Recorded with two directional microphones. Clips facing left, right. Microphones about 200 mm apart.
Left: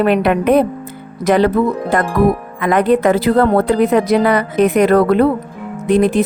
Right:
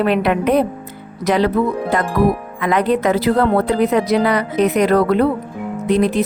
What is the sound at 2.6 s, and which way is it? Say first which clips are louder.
A woman's voice: left 4 dB; 50° left (ahead or behind).